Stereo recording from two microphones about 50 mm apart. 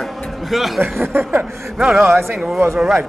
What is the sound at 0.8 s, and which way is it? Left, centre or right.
Speech, right.